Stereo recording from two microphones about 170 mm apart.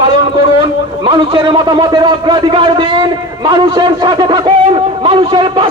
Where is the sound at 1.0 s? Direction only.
30° right (ahead or behind).